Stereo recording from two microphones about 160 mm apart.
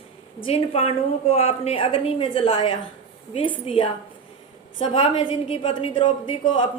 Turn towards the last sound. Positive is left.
turn(degrees=30)  # may be behind; listen again after turning